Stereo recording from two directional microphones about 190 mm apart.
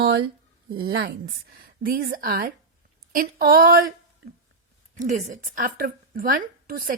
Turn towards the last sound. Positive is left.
turn(degrees=-50)  # may be behind; listen again after turning